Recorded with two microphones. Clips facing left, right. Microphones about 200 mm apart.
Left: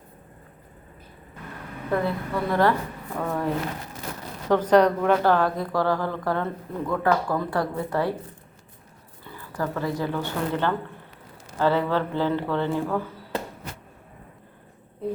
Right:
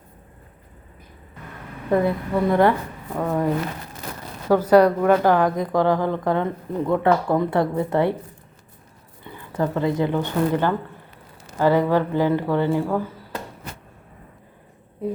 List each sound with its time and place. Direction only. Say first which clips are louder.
1.9 s speech: right 5 dB; 20° right (ahead or behind)
9.2 s speech: right 5 dB; 20° right (ahead or behind)